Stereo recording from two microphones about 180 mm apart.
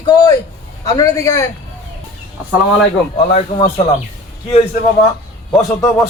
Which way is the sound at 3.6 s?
30° left (ahead or behind).